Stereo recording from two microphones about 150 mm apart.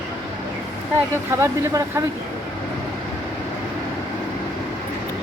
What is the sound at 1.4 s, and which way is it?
Speech, 20° right (ahead or behind).